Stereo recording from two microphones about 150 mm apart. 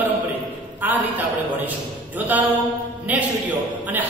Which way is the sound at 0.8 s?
10° right (ahead or behind).